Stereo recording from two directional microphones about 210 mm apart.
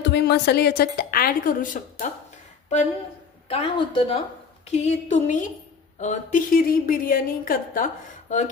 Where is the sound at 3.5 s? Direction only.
25° left (ahead or behind).